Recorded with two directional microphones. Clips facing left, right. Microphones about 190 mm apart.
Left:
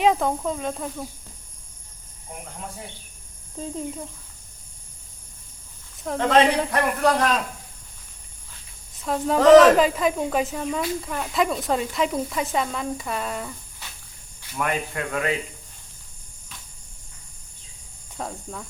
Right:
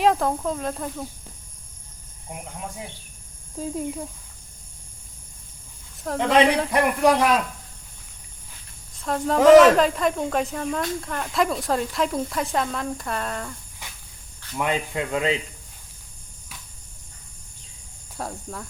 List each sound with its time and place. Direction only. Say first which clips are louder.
0.0 s speech: even; centre (ahead or behind)
3.6 s a man's voice: right 2 dB; 5° right (ahead or behind)
6.1 s a man's voice: even; 15° right (ahead or behind)
9.0 s speech: even; centre (ahead or behind)
9.4 s a man's voice: even; 10° right (ahead or behind)
9.7 s speech: left 1 dB; 5° left (ahead or behind)
14.5 s speech: right 1 dB; 20° right (ahead or behind)
18.2 s speech: even; centre (ahead or behind)